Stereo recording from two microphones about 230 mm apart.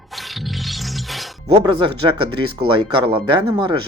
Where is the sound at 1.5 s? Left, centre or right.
Right.